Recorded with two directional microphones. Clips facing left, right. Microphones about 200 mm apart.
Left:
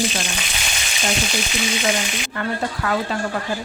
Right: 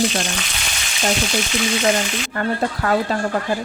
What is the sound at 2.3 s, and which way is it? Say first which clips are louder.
Speech: right 3 dB; 40° right (ahead or behind).